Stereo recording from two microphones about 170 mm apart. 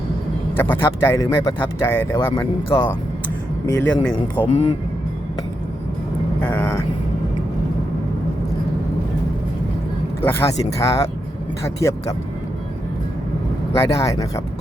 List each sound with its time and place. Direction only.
0.5 s speech: 10° left (ahead or behind)
6.4 s speech: 10° left (ahead or behind)
10.2 s speech: 15° left (ahead or behind)
13.7 s speech: 20° left (ahead or behind)